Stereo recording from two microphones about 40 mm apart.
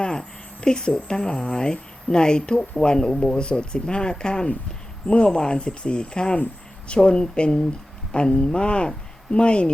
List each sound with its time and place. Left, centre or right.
0.0 s speech: centre
3.1 s speech: centre
3.3 s speech: left